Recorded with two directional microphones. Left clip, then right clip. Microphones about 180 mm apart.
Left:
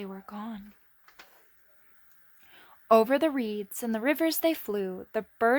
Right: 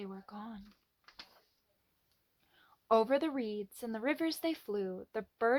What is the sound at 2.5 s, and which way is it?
Speech, 40° left (ahead or behind).